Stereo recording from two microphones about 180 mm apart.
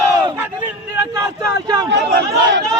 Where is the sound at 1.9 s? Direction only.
85° right.